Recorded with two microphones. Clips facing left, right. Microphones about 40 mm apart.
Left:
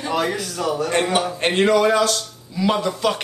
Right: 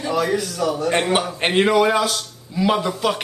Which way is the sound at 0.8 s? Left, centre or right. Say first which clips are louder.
Right 1 dB; centre.